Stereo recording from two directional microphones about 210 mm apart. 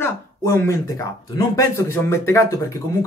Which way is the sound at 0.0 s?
10° left (ahead or behind).